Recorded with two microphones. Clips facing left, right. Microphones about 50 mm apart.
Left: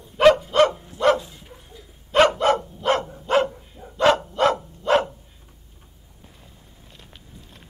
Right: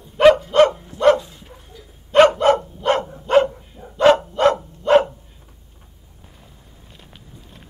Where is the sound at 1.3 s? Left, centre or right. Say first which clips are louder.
Right 2 dB; centre.